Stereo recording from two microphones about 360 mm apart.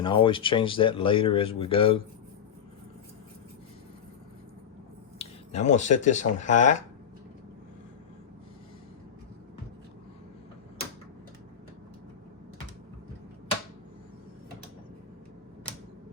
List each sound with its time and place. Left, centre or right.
0.0 s speech: centre
5.2 s speech: centre